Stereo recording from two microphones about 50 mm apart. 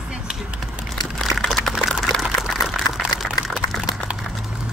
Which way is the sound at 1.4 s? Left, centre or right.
Centre.